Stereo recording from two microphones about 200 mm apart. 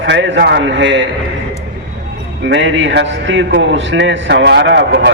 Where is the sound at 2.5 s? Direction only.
65° right (ahead or behind).